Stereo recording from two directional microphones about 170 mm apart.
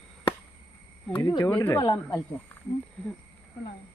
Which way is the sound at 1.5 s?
10° left (ahead or behind).